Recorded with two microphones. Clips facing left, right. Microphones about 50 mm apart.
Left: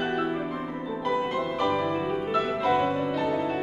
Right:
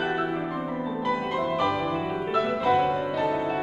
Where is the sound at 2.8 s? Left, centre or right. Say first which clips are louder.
Right 1 dB; centre.